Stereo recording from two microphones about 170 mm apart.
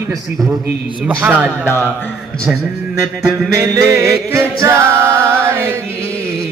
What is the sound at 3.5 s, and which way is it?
A capella, 15° right (ahead or behind).